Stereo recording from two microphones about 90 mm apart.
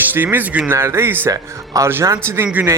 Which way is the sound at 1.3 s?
40° right (ahead or behind).